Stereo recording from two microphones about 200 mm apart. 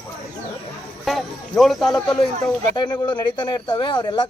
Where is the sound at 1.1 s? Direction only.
Centre (ahead or behind).